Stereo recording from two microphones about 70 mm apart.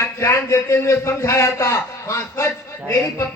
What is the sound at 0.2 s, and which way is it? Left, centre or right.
A man's voice, left.